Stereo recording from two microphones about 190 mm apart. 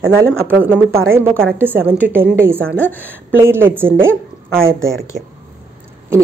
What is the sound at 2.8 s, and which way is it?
Speech, 10° left (ahead or behind).